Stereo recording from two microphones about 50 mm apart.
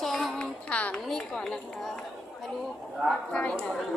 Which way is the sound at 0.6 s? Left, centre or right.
Left.